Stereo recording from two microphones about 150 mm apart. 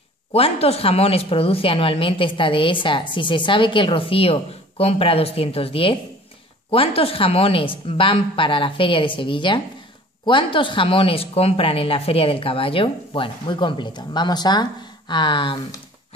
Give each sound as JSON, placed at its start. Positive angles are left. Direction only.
{"t": 0.3, "sound": "speech", "side_deg": 40}